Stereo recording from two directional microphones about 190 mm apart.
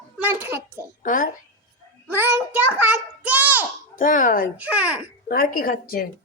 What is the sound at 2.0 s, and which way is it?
A child's voice, 10° right (ahead or behind).